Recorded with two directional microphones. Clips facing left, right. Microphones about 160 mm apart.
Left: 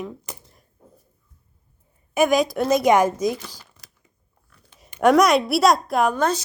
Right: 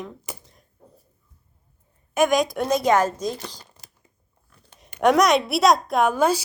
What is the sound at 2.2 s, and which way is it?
A woman's voice, 5° left (ahead or behind).